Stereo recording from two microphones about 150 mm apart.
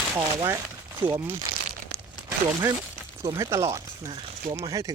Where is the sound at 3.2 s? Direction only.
20° right (ahead or behind).